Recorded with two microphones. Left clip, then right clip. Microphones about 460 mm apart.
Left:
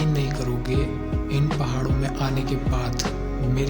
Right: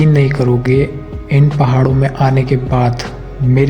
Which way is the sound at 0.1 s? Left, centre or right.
Left.